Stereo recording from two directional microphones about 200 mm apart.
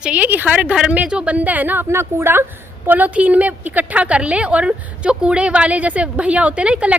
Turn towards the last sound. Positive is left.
turn(degrees=-5)  # may be behind; listen again after turning